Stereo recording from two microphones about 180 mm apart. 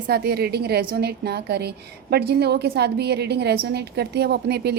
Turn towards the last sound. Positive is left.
turn(degrees=-65)  # may be behind; listen again after turning